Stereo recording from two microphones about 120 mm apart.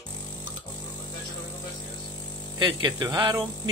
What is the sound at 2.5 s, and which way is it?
Speech, 35° right (ahead or behind).